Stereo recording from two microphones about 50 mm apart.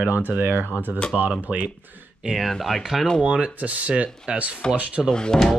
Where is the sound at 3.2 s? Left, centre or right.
Right.